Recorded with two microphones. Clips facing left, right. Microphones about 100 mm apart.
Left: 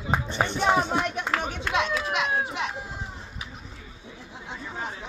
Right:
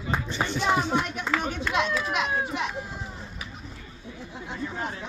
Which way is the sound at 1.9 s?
10° left (ahead or behind).